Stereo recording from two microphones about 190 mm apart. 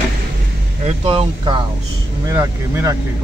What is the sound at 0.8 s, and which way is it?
Speech, 30° right (ahead or behind).